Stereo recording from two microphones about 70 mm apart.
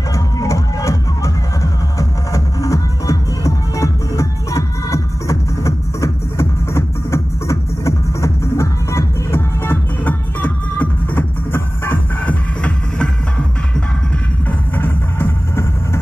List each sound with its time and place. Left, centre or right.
0.1 s music: left
14.8 s music: left